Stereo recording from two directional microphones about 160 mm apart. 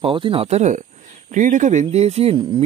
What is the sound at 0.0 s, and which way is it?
Speech, 35° right (ahead or behind).